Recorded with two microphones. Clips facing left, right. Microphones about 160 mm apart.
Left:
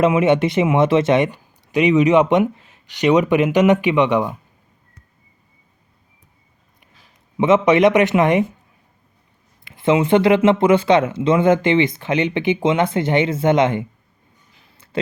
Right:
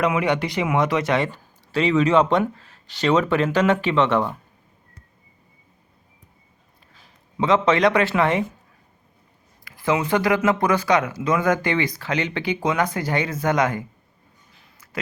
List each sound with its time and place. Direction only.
0.0 s speech: 25° left (ahead or behind)
7.3 s speech: 20° left (ahead or behind)
9.6 s speech: 25° left (ahead or behind)